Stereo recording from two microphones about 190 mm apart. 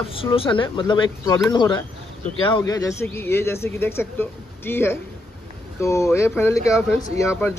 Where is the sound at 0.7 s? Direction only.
25° left (ahead or behind).